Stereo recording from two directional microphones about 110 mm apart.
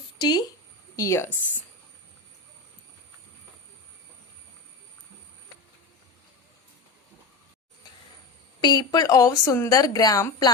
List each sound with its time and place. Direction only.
0.2 s speech: 40° left (ahead or behind)
0.9 s speech: 25° left (ahead or behind)
8.6 s a woman's voice: 40° left (ahead or behind)